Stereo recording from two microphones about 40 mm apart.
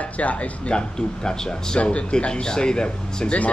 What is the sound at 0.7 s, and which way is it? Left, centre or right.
Speech, centre.